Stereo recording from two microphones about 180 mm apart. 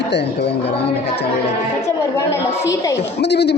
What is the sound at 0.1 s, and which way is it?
Speech, 70° left (ahead or behind).